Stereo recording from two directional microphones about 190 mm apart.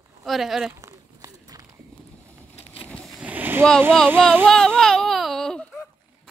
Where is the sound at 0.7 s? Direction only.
15° right (ahead or behind).